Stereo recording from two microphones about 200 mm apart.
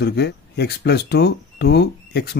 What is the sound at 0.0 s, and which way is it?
Speech, 55° left (ahead or behind).